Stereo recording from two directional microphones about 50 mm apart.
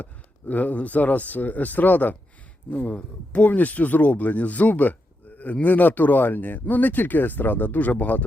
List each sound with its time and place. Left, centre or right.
0.0 s speech: left